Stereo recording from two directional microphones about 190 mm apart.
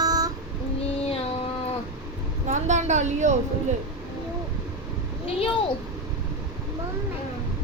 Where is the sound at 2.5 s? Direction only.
40° right (ahead or behind).